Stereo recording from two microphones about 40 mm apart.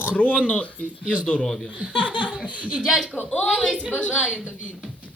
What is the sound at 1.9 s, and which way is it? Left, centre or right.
Speech, right.